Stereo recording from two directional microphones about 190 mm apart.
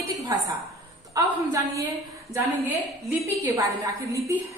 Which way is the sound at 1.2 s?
20° right (ahead or behind).